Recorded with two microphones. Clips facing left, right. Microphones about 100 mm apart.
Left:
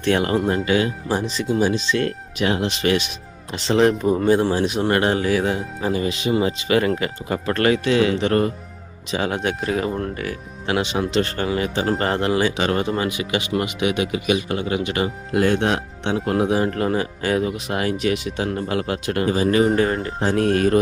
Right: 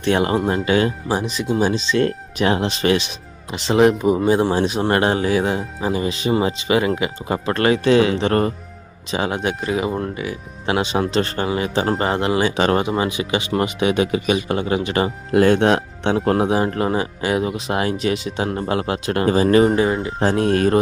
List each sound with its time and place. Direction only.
0.0 s speech: 25° right (ahead or behind)
3.5 s speech: 15° right (ahead or behind)
7.3 s speech: 25° right (ahead or behind)
9.1 s speech: 20° right (ahead or behind)
9.4 s speech: 5° right (ahead or behind)
10.7 s speech: 35° right (ahead or behind)
16.5 s speech: 25° right (ahead or behind)
17.4 s speech: 25° right (ahead or behind)
19.2 s speech: 40° right (ahead or behind)
19.7 s speech: 5° right (ahead or behind)
20.3 s speech: 25° right (ahead or behind)